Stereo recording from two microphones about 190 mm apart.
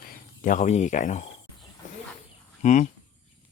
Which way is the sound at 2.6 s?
40° left (ahead or behind).